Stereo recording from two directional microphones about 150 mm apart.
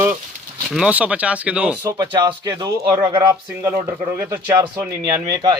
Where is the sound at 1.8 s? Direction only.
25° right (ahead or behind).